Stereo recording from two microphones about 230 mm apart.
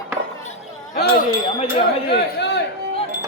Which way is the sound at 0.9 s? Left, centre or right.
Left.